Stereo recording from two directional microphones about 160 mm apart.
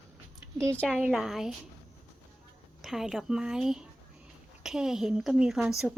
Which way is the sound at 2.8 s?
Centre (ahead or behind).